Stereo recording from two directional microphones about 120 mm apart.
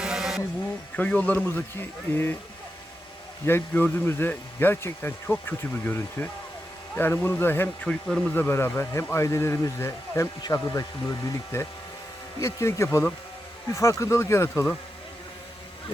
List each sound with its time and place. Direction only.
0.0 s a sound: 5° right (ahead or behind)
0.9 s speech: 10° left (ahead or behind)
3.4 s speech: 20° left (ahead or behind)
7.9 s speech: 5° left (ahead or behind)